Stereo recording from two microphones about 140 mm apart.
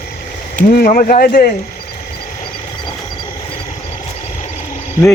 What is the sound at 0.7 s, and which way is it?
Speech, 90° left.